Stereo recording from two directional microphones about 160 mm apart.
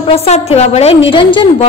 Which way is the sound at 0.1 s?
40° left (ahead or behind).